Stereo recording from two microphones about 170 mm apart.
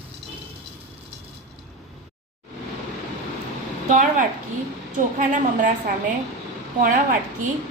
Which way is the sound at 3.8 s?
50° right (ahead or behind).